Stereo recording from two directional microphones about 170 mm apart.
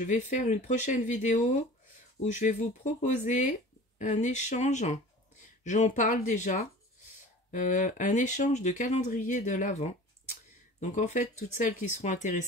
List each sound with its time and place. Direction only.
0.0 s speech: 45° left (ahead or behind)